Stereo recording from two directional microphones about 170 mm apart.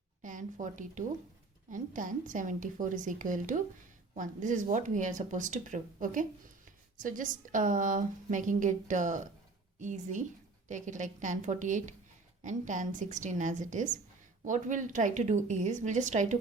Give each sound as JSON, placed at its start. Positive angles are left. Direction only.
{"t": 0.2, "sound": "a woman's voice", "side_deg": -50}